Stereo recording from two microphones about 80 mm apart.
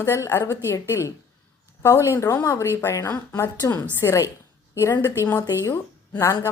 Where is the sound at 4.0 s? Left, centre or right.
Left.